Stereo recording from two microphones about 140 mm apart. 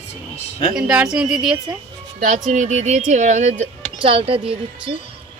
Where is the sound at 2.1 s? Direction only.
70° right (ahead or behind).